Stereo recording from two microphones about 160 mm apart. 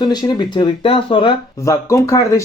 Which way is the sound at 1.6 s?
20° left (ahead or behind).